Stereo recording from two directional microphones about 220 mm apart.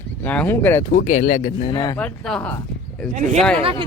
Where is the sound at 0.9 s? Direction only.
35° left (ahead or behind).